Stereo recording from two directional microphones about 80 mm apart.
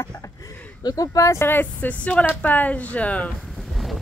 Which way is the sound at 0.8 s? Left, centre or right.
Left.